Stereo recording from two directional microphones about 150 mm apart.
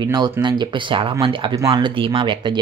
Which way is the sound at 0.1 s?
30° right (ahead or behind).